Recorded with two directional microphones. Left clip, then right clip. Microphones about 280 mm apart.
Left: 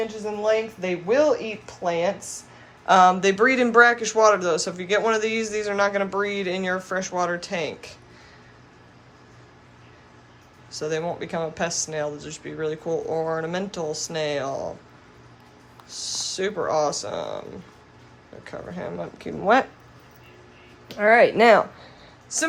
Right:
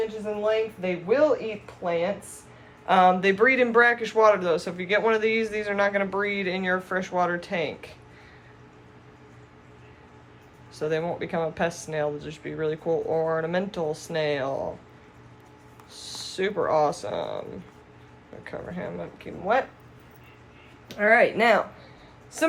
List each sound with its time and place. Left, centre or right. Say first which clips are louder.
0.4 s speech: left 3 dB; centre
10.7 s speech: even; centre
15.9 s speech: left 7 dB; centre
18.4 s speech: left 1 dB; centre
19.3 s speech: left 6 dB; left
20.8 s speech: left 3 dB; left